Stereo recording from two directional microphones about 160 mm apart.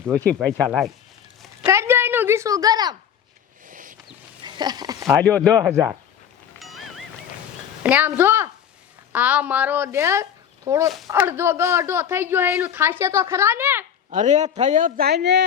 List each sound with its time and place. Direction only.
0.7 s speech: centre (ahead or behind)
1.6 s a sound: 15° right (ahead or behind)
3.7 s a sound: 55° right (ahead or behind)
4.4 s speech: 25° right (ahead or behind)
5.2 s speech: 5° left (ahead or behind)
5.7 s a woman's voice: 15° right (ahead or behind)
6.6 s music: centre (ahead or behind)
7.9 s a woman's voice: 10° right (ahead or behind)
10.8 s speech: centre (ahead or behind)
11.1 s a woman's voice: 15° right (ahead or behind)
14.1 s a man's voice: 50° right (ahead or behind)
15.0 s speech: 90° right